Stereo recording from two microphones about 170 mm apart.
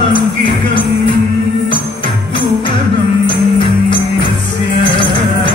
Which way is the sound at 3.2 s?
30° left (ahead or behind).